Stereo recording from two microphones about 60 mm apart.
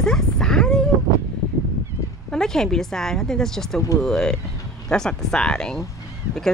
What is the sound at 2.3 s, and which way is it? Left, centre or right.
Speech, centre.